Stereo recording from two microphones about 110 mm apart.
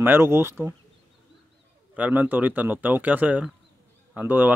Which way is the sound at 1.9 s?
15° right (ahead or behind).